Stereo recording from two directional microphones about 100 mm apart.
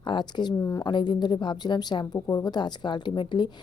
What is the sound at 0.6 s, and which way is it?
Speech, 25° left (ahead or behind).